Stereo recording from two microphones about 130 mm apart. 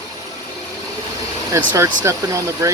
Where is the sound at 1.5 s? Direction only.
25° right (ahead or behind).